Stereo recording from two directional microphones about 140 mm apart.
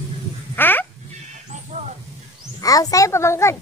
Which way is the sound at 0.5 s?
15° left (ahead or behind).